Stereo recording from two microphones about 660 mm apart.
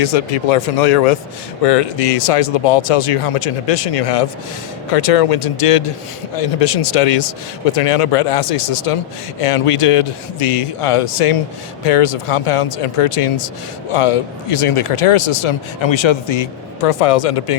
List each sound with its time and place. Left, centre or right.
0.0 s speech: left
1.6 s speech: left